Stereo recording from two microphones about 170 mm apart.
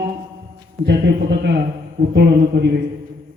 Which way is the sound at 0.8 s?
80° right.